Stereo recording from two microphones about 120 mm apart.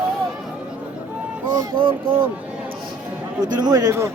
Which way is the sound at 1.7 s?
45° right (ahead or behind).